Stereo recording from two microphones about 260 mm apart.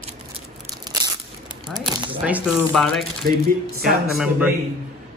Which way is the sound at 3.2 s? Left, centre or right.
Right.